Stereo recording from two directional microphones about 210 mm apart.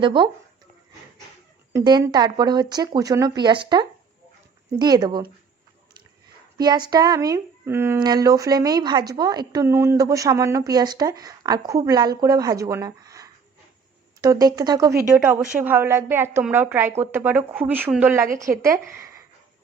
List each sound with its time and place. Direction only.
0.0 s speech: 25° right (ahead or behind)
1.7 s speech: 20° right (ahead or behind)
6.6 s speech: 20° right (ahead or behind)